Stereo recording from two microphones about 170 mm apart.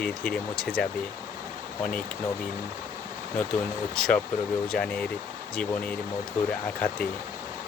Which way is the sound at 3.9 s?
5° left (ahead or behind).